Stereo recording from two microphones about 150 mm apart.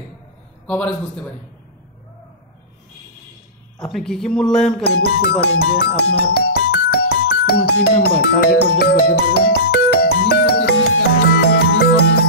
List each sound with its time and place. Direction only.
0.7 s a man's voice: 10° left (ahead or behind)
3.8 s speech: 5° left (ahead or behind)
4.8 s speech: 90° left
8.7 s music: 90° left